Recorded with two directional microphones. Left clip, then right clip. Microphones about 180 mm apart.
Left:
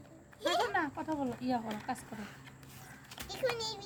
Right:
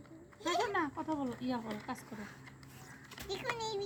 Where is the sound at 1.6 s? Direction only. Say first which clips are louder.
Left 2 dB; 15° right (ahead or behind).